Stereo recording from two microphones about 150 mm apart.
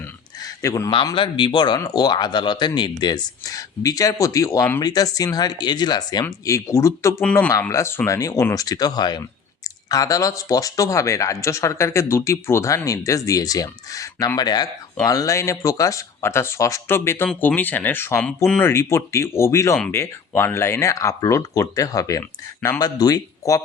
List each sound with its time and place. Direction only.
0.0 s a sound: 25° left (ahead or behind)
1.1 s speech: 35° left (ahead or behind)
22.2 s speech: 10° left (ahead or behind)
22.8 s speech: 25° left (ahead or behind)